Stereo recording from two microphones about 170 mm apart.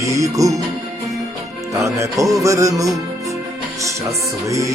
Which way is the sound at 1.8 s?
20° right (ahead or behind).